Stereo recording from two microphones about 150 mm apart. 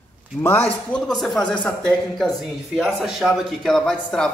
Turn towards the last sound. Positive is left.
turn(degrees=5)  # may be behind; listen again after turning